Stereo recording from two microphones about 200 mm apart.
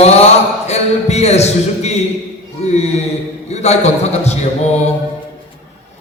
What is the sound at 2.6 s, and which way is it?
Mantra, 35° left (ahead or behind).